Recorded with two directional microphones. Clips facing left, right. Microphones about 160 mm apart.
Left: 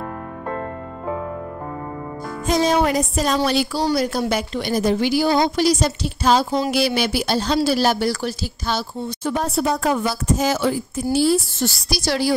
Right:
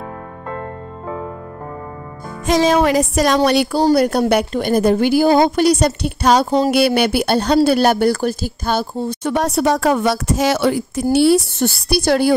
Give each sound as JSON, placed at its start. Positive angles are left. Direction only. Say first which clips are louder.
{"t": 2.4, "sound": "music", "louder": "right 4 dB", "side_deg": -90}
{"t": 3.3, "sound": "a woman's voice", "louder": "right 5 dB", "side_deg": -60}
{"t": 9.2, "sound": "a woman's voice", "louder": "right 4 dB", "side_deg": -75}